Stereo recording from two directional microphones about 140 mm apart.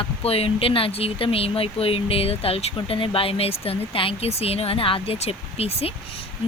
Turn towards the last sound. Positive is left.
turn(degrees=45)  # may be behind; listen again after turning